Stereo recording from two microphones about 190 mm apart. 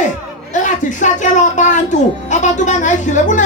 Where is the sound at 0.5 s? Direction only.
40° left (ahead or behind).